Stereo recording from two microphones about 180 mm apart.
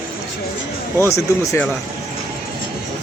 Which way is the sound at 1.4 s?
15° left (ahead or behind).